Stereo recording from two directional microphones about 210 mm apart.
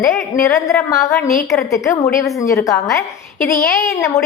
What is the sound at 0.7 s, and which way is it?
A woman's voice, 15° left (ahead or behind).